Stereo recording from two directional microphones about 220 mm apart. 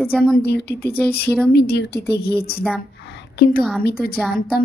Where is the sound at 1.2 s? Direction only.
5° left (ahead or behind).